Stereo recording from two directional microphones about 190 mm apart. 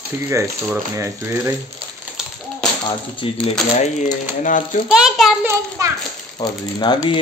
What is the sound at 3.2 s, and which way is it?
Speech, 30° left (ahead or behind).